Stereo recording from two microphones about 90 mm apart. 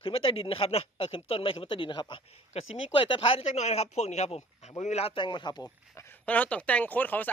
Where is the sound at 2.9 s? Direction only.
75° left (ahead or behind).